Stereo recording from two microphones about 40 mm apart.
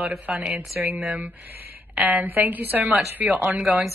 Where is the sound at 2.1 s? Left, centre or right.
Right.